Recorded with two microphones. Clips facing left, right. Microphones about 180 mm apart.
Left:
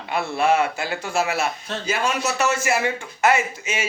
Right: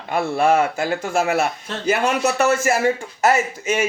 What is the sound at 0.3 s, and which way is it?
A man's voice, 45° right (ahead or behind).